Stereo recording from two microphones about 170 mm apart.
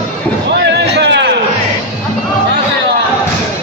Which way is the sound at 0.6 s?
90° right.